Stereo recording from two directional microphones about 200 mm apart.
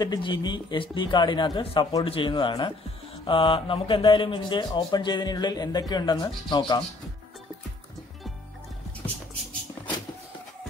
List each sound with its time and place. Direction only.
0.0 s speech: 20° left (ahead or behind)